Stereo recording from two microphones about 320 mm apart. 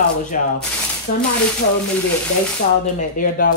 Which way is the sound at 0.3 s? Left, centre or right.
Left.